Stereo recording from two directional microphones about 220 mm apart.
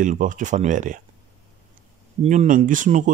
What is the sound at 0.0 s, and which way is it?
Speech, 35° right (ahead or behind).